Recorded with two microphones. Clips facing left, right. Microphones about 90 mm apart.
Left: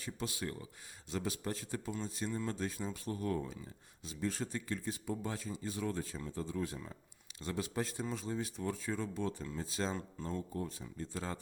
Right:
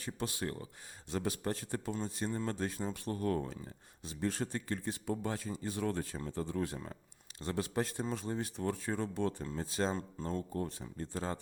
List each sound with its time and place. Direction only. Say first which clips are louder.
0.0 s speech: right 2 dB; 55° right (ahead or behind)
9.4 s speech: right 3 dB; 45° right (ahead or behind)
10.5 s speech: right 3 dB; 55° right (ahead or behind); by 11.3 s 40° right (ahead or behind)